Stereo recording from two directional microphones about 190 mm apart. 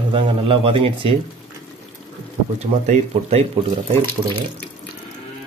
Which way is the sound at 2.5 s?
35° right (ahead or behind).